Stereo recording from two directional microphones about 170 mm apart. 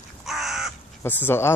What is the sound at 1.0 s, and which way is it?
Speech, 10° left (ahead or behind).